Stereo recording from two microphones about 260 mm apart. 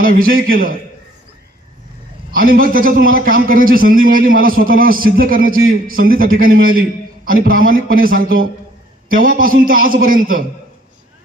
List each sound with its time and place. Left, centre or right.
0.0 s a man's voice: right
2.3 s a man's voice: right